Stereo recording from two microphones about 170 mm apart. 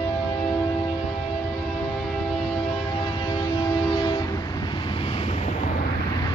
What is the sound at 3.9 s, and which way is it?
Train, 25° left (ahead or behind).